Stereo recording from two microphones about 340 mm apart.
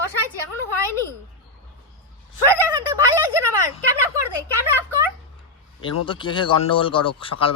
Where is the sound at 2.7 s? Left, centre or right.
Centre.